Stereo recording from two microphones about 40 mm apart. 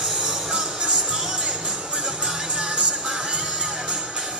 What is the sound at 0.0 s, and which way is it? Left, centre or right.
Music, centre.